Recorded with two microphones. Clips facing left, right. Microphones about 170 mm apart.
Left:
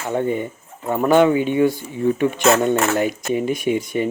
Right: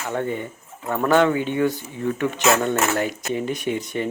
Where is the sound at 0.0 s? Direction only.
15° left (ahead or behind).